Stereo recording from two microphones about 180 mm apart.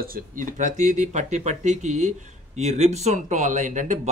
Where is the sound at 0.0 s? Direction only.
50° right (ahead or behind).